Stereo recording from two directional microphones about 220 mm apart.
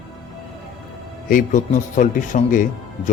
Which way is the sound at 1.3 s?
35° left (ahead or behind).